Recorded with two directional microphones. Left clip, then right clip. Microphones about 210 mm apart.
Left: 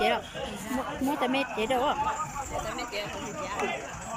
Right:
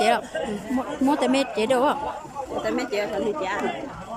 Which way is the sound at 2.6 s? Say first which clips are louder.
Right 8 dB; 55° right (ahead or behind).